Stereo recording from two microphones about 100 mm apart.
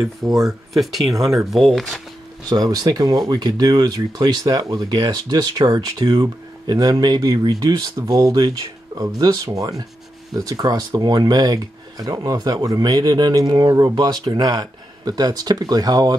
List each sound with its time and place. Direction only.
0.4 s speech: centre (ahead or behind)
2.5 s speech: 40° right (ahead or behind)